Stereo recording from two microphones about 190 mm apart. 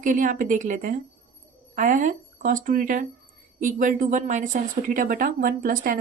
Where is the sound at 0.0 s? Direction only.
45° right (ahead or behind).